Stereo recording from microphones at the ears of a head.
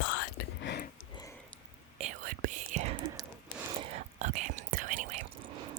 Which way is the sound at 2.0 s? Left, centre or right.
Right.